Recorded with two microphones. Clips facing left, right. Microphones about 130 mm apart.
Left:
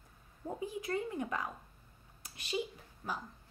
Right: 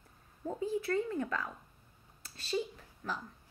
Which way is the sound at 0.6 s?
15° left (ahead or behind).